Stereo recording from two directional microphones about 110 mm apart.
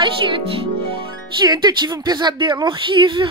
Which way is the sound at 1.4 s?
40° right (ahead or behind).